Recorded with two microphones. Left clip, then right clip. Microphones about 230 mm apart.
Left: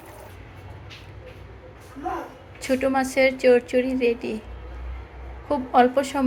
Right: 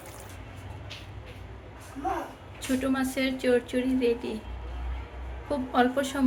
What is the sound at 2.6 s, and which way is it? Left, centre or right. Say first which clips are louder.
A woman's voice: left 7 dB; centre.